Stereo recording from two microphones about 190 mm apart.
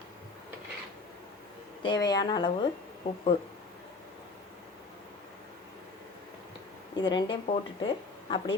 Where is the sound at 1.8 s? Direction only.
20° left (ahead or behind).